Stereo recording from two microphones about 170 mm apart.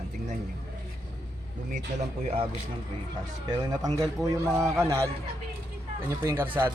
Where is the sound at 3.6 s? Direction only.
20° right (ahead or behind).